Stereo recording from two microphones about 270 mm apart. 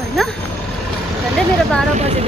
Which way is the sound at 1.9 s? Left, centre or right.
Right.